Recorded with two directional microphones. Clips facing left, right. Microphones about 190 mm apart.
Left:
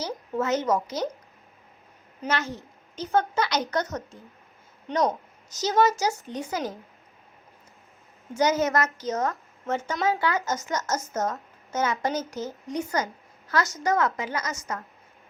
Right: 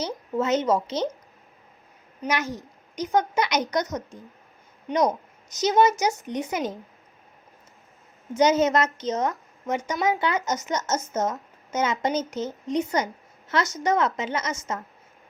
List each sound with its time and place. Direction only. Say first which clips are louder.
0.3 s speech: right 2 dB; 20° right (ahead or behind)
2.2 s a woman's voice: right 2 dB; 15° right (ahead or behind)
8.3 s speech: right 3 dB; 20° right (ahead or behind)